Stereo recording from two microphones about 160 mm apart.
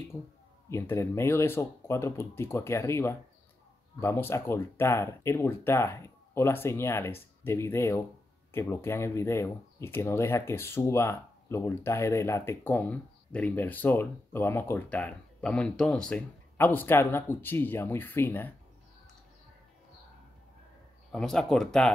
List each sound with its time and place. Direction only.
0.7 s speech: 15° left (ahead or behind)
21.1 s speech: 5° left (ahead or behind)